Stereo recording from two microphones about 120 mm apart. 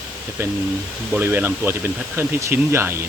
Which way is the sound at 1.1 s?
15° right (ahead or behind).